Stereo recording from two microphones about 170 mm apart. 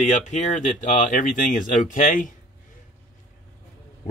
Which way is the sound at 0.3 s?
45° left (ahead or behind).